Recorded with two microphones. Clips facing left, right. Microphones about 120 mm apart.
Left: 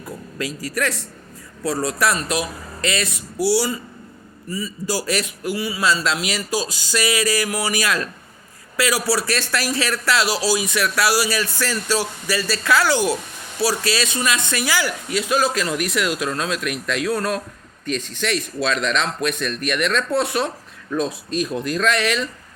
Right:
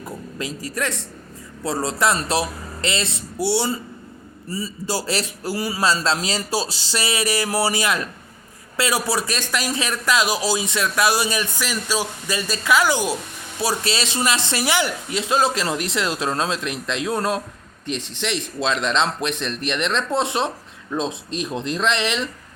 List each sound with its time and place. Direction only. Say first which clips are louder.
0.0 s speech: left 1 dB; 25° right (ahead or behind)